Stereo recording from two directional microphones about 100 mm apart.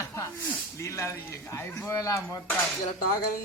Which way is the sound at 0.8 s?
30° left (ahead or behind).